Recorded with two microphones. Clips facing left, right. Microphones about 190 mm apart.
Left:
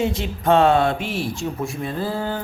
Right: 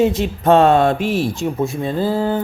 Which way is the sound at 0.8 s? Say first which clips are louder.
Right 5 dB; 45° right (ahead or behind).